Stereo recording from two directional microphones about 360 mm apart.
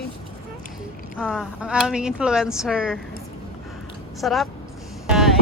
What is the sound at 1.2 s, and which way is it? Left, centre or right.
Speech, centre.